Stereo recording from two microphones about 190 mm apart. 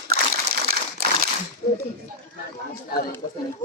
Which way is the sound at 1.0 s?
55° right (ahead or behind).